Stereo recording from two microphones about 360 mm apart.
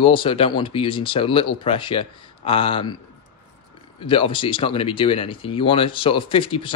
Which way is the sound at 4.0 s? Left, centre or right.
Centre.